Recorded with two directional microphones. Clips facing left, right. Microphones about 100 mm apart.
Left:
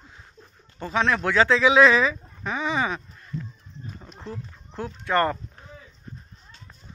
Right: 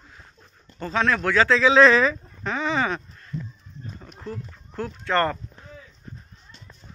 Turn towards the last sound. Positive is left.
turn(degrees=15)  # may be behind; listen again after turning